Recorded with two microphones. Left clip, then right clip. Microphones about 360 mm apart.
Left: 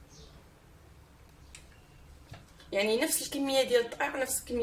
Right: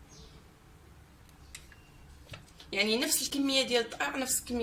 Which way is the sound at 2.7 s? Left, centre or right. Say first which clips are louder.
Left 1 dB; centre.